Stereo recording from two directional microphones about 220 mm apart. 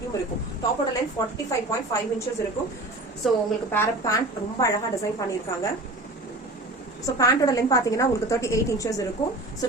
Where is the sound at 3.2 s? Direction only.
Centre (ahead or behind).